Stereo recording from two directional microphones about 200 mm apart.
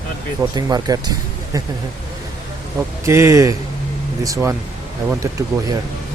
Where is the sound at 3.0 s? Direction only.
15° right (ahead or behind).